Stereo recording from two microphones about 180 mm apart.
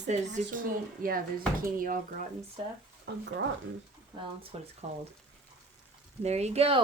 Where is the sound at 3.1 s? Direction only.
70° right (ahead or behind).